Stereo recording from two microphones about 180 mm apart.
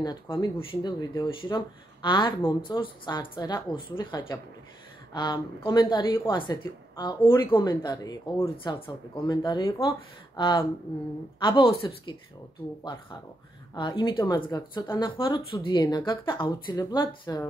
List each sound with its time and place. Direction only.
0.0 s a woman's voice: 25° left (ahead or behind)
13.7 s a woman's voice: 25° left (ahead or behind)